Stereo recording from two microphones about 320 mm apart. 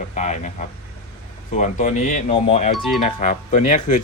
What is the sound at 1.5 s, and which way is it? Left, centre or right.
Speech, left.